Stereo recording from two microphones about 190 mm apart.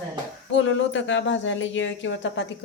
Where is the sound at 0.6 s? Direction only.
80° left.